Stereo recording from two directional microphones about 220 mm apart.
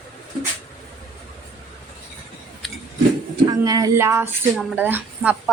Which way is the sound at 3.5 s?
15° right (ahead or behind).